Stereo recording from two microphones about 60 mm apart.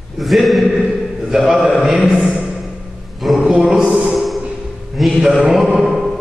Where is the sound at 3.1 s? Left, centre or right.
Centre.